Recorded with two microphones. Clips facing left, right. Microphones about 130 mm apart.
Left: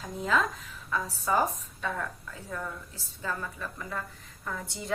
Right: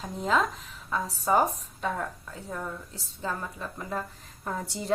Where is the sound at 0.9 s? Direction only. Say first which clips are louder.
Right 3 dB; 30° right (ahead or behind).